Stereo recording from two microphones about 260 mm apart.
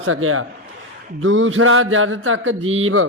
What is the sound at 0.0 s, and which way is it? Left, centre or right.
Speech, right.